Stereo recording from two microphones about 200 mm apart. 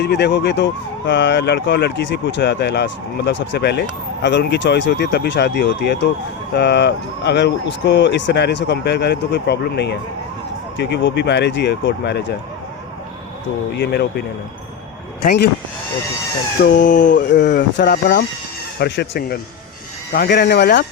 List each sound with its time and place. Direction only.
0.0 s speech: 55° left (ahead or behind)
13.7 s speech: 55° left (ahead or behind)
16.7 s chicken: 40° left (ahead or behind)
17.2 s speech: 60° left (ahead or behind)